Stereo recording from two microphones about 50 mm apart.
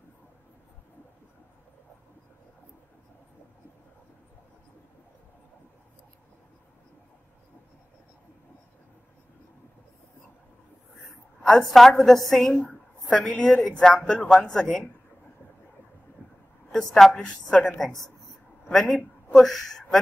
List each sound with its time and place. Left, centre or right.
11.4 s a woman's voice: centre
16.2 s a sound: right
16.7 s a woman's voice: centre
18.7 s a woman's voice: centre